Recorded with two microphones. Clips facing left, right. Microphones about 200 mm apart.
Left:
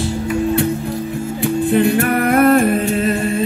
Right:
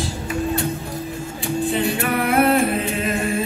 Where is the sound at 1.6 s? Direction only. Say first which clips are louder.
Left 7 dB; 55° left (ahead or behind).